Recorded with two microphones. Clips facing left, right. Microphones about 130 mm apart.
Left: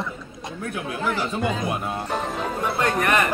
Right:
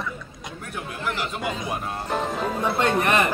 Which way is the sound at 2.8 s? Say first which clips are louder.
Even; 25° right (ahead or behind).